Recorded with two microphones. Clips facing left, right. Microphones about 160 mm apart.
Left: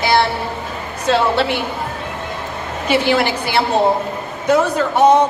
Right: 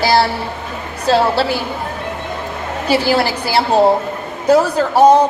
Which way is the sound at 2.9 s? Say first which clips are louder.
Right 1 dB; 35° right (ahead or behind).